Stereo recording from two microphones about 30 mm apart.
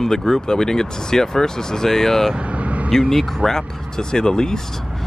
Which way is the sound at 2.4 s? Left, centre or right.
Right.